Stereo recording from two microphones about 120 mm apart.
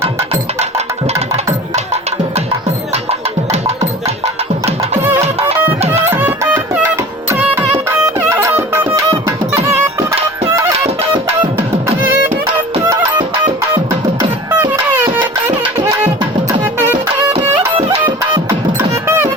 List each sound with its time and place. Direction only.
2.9 s music: 60° right (ahead or behind)
4.9 s music: 20° right (ahead or behind)
5.2 s music: 60° right (ahead or behind)
5.9 s music: 20° right (ahead or behind)
14.2 s music: 20° right (ahead or behind)
18.3 s music: 20° right (ahead or behind)